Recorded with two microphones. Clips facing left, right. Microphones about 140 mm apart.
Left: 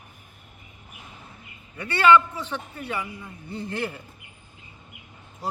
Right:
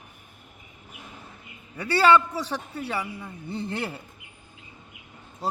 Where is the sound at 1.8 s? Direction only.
35° right (ahead or behind).